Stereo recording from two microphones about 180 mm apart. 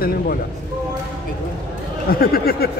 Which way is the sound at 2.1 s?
55° left (ahead or behind).